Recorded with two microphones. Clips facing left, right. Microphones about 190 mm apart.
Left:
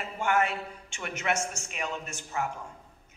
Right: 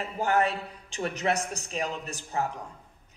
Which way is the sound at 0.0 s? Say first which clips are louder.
Right 2 dB; 35° right (ahead or behind).